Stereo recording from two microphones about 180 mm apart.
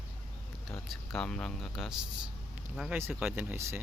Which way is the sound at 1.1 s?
5° left (ahead or behind).